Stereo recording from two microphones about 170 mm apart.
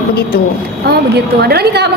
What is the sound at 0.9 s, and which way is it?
A woman's voice, 70° right (ahead or behind).